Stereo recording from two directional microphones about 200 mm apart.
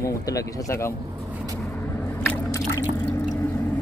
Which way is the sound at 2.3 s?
15° left (ahead or behind).